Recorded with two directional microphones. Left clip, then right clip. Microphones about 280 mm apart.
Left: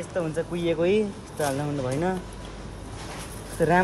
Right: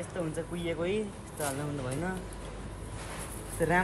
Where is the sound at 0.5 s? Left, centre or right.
Left.